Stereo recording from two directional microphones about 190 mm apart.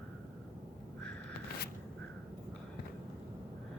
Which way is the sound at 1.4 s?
55° left (ahead or behind).